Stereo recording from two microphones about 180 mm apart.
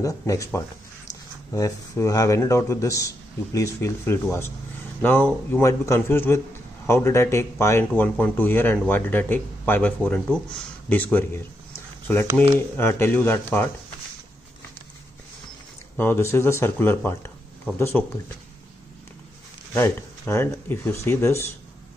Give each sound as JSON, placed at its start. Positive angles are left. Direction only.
{"t": 0.0, "sound": "speech", "side_deg": 15}
{"t": 12.7, "sound": "speech", "side_deg": 10}
{"t": 16.0, "sound": "speech", "side_deg": 15}
{"t": 19.7, "sound": "speech", "side_deg": 15}